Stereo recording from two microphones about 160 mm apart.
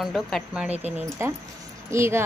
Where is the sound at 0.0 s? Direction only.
Centre (ahead or behind).